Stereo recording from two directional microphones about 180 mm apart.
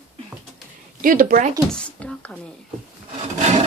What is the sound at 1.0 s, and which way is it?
Speech, 50° right (ahead or behind).